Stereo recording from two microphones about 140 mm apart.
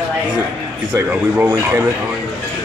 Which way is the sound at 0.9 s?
10° right (ahead or behind).